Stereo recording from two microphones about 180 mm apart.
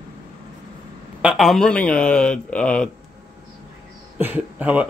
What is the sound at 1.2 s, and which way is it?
Speech, centre (ahead or behind).